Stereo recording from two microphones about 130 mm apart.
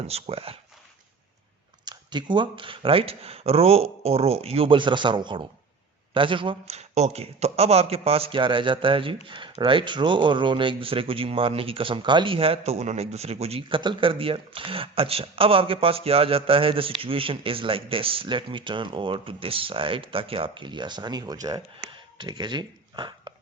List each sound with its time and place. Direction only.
0.1 s a man's voice: 50° right (ahead or behind)
1.8 s a man's voice: 35° right (ahead or behind)
6.7 s a man's voice: 60° right (ahead or behind); by 23.3 s 35° right (ahead or behind)